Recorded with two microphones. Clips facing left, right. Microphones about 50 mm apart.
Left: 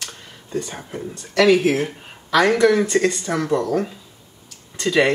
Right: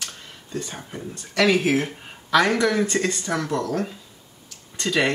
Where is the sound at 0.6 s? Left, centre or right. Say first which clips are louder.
Left 5 dB; centre.